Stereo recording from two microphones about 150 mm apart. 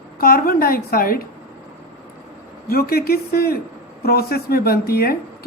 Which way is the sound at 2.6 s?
90° left.